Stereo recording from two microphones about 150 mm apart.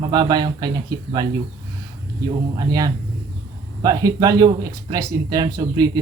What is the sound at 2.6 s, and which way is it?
Speech, 25° right (ahead or behind).